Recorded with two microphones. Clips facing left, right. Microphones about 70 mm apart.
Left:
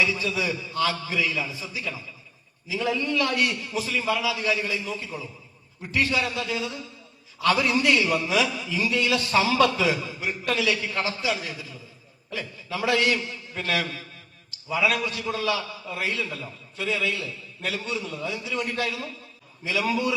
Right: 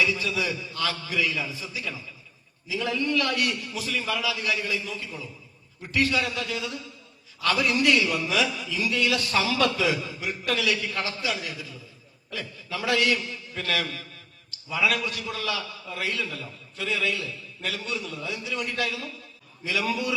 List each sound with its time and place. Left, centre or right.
0.0 s a man's voice: left